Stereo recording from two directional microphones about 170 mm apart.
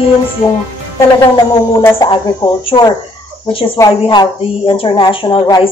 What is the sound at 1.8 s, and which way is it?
A woman's voice, 20° left (ahead or behind).